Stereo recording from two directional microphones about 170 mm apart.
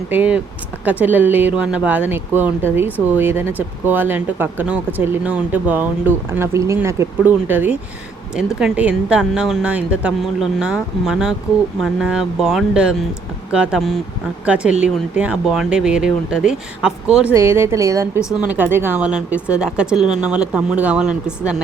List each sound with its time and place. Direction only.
0.1 s speech: 10° right (ahead or behind)
17.3 s speech: 15° right (ahead or behind)
18.2 s speech: 20° left (ahead or behind)
18.5 s speech: 10° right (ahead or behind)